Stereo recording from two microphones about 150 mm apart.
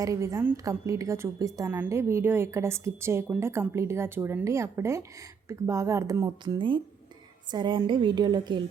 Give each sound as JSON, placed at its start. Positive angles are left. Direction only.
{"t": 0.0, "sound": "a woman's voice", "side_deg": -20}